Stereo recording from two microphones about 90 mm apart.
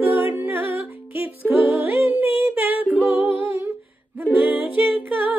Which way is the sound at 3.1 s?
20° right (ahead or behind).